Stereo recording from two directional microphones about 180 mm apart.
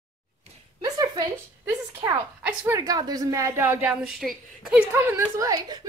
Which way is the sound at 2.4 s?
5° right (ahead or behind).